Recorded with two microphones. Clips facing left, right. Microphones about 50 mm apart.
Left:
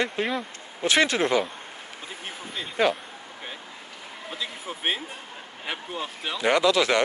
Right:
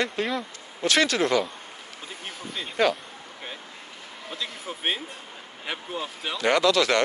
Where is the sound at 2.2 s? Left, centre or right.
Centre.